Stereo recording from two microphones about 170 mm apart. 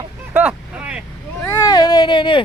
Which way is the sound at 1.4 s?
20° left (ahead or behind).